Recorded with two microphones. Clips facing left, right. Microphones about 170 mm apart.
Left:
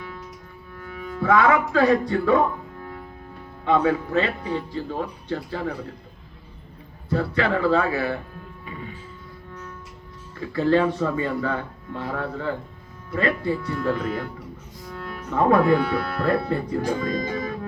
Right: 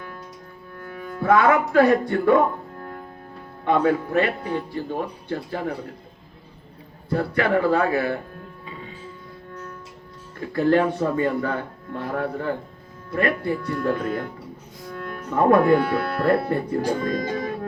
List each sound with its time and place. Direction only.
0.9 s speech: 50° right (ahead or behind)
7.1 s speech: 55° right (ahead or behind)
10.4 s speech: 50° right (ahead or behind)
17.0 s speech: 60° right (ahead or behind)